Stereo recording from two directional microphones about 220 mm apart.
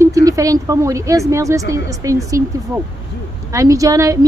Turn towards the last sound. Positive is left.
turn(degrees=-15)  # may be behind; listen again after turning